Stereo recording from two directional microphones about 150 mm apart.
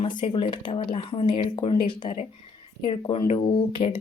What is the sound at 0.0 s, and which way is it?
Speech, 35° left (ahead or behind).